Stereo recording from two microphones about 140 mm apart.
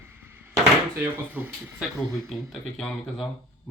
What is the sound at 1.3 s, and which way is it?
Speech, 15° right (ahead or behind).